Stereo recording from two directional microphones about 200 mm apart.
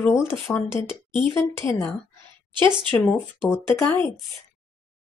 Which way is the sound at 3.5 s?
10° left (ahead or behind).